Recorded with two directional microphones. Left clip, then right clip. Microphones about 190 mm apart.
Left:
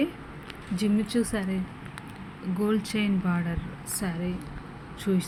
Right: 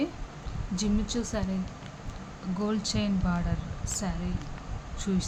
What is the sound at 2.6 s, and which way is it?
Speech, 5° left (ahead or behind).